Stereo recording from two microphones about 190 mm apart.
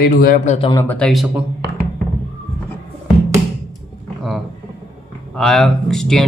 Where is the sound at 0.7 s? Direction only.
10° left (ahead or behind).